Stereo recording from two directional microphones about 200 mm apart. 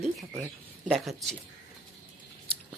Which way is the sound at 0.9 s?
Centre (ahead or behind).